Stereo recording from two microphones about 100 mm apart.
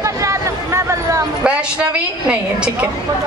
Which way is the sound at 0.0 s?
30° right (ahead or behind).